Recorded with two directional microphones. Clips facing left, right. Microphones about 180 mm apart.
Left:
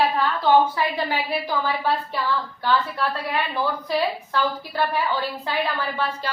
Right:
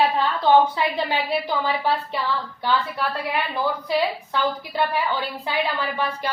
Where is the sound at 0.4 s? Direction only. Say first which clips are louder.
Right 1 dB; 20° right (ahead or behind).